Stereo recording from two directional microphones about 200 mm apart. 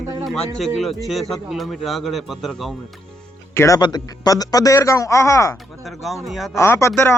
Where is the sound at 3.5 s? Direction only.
15° left (ahead or behind).